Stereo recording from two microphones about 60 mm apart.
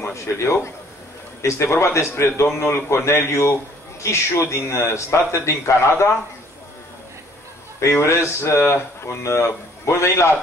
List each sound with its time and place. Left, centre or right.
0.0 s speech: left
8.0 s speech: left